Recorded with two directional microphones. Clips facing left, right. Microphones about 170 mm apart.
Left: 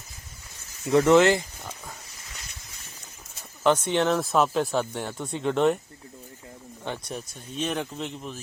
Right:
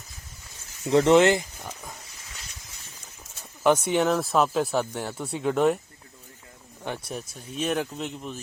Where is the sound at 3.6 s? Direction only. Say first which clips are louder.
Right 1 dB; 10° right (ahead or behind).